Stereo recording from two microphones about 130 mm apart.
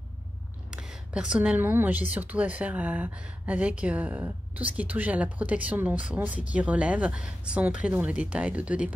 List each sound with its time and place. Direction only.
0.7 s speech: 5° right (ahead or behind)